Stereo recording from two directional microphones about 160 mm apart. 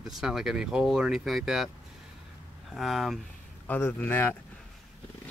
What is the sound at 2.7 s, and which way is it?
Speech, centre (ahead or behind).